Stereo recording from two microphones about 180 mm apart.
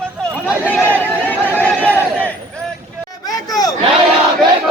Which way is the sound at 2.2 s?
10° left (ahead or behind).